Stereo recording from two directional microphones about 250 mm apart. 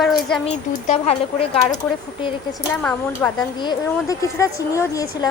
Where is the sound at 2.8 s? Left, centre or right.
Centre.